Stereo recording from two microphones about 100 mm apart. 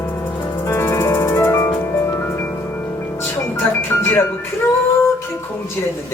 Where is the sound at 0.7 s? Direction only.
25° left (ahead or behind).